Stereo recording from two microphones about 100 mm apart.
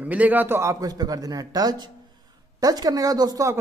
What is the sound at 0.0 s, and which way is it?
A man's voice, 15° right (ahead or behind).